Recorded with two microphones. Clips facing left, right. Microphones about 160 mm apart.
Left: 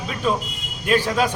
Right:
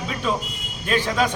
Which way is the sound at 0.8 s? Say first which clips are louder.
Left 2 dB; 10° left (ahead or behind).